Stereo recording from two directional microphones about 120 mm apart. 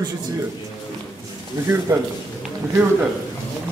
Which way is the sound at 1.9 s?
20° right (ahead or behind).